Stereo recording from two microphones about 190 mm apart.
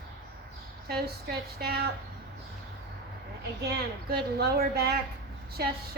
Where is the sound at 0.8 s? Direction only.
55° right (ahead or behind).